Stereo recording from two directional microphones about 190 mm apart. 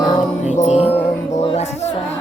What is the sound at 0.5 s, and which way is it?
Music, 35° left (ahead or behind).